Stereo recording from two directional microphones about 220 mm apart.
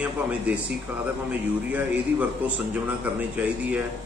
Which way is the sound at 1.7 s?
5° right (ahead or behind).